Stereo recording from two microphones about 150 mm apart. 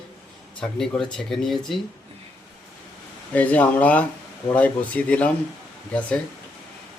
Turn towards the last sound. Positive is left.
turn(degrees=10)  # may be behind; listen again after turning